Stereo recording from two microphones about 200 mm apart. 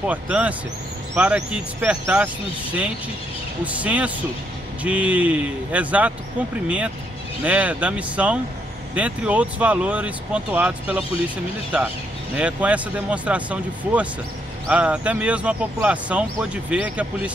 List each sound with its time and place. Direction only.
0.0 s speech: 5° right (ahead or behind)
7.4 s speech: 5° right (ahead or behind)
12.4 s speech: 5° right (ahead or behind)